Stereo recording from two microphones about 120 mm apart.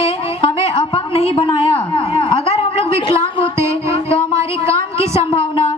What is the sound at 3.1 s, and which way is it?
Speech, 45° left (ahead or behind).